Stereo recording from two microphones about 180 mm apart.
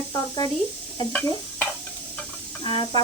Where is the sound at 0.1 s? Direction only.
20° left (ahead or behind).